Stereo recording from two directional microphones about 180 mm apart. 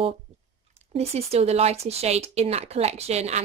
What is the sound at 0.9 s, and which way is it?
A woman's voice, 35° right (ahead or behind).